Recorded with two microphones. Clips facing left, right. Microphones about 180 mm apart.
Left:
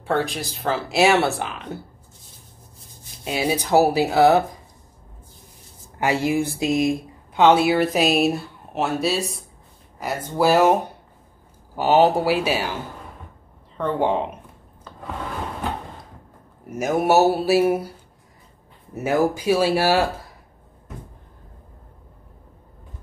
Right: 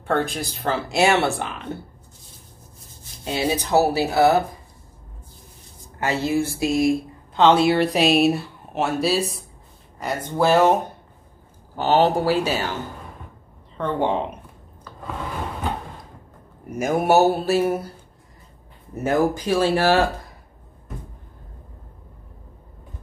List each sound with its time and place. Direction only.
0.0 s speech: centre (ahead or behind)
3.3 s speech: 10° left (ahead or behind)
5.9 s speech: 15° left (ahead or behind)
7.3 s speech: 10° left (ahead or behind)
13.7 s speech: 5° left (ahead or behind)
16.7 s speech: centre (ahead or behind)
18.9 s speech: 10° left (ahead or behind)